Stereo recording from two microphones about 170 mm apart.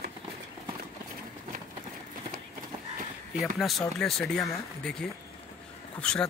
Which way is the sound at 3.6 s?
Centre (ahead or behind).